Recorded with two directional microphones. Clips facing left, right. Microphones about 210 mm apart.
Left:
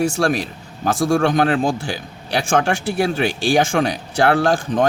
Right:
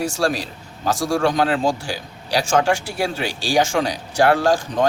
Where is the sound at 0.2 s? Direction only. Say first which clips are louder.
Left 2 dB; 55° left (ahead or behind).